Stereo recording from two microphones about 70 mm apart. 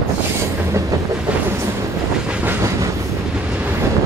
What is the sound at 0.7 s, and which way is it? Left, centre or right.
Train, right.